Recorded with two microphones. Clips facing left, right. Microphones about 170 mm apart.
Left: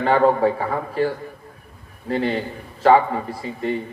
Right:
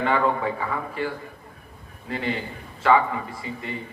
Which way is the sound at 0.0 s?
35° left (ahead or behind).